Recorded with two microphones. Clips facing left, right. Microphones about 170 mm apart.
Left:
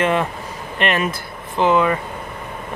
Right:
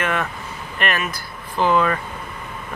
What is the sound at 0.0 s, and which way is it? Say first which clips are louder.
Speech: left 5 dB; 25° left (ahead or behind).